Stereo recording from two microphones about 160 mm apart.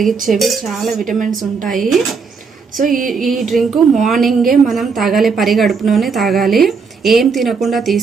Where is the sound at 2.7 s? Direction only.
55° right (ahead or behind).